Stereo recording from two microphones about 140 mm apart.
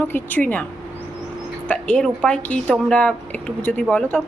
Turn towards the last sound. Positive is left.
turn(degrees=10)  # may be behind; listen again after turning